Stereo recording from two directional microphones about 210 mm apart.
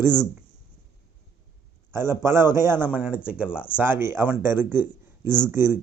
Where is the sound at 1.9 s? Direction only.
10° right (ahead or behind).